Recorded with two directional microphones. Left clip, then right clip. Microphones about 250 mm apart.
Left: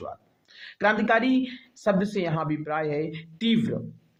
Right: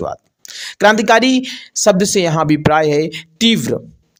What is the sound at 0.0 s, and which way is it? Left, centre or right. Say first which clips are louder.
Speech: right 15 dB; right.